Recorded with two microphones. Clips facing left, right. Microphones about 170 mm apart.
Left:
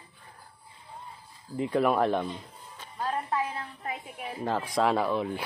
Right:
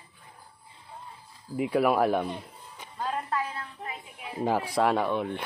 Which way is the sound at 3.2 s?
15° left (ahead or behind).